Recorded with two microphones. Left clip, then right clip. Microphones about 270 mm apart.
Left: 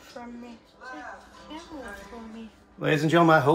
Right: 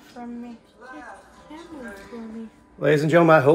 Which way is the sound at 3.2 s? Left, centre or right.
Left.